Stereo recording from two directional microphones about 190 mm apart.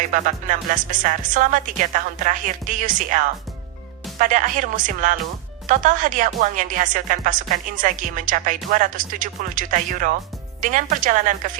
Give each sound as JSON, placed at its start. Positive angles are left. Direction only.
{"t": 0.1, "sound": "speech", "side_deg": -45}